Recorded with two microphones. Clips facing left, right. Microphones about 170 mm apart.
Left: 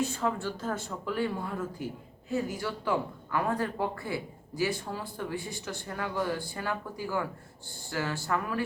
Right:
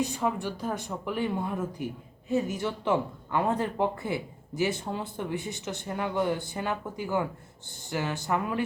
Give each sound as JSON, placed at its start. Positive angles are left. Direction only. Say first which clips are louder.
{"t": 0.0, "sound": "speech", "louder": "right 1 dB", "side_deg": -15}